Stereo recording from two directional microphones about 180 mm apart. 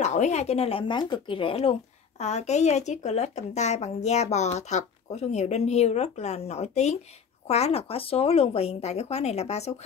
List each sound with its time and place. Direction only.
0.0 s speech: 40° left (ahead or behind)